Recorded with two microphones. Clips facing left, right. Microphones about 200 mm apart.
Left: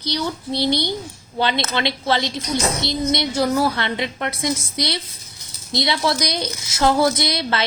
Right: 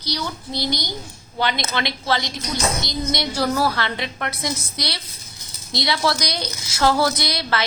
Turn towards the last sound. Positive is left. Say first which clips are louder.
# left 2 dB
turn(degrees=25)  # may be behind; listen again after turning